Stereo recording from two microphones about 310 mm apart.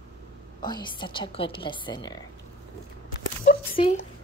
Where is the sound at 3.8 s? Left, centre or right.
Centre.